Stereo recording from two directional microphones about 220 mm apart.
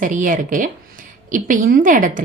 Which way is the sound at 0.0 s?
35° right (ahead or behind).